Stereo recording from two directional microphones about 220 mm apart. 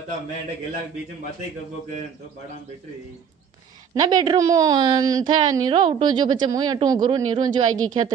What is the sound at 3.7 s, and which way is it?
A woman's voice, 15° right (ahead or behind).